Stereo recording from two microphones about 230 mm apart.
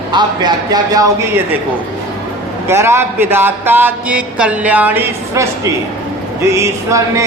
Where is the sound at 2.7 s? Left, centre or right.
Centre.